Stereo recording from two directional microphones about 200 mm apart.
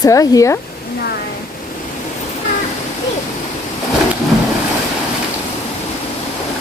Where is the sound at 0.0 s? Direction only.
15° left (ahead or behind).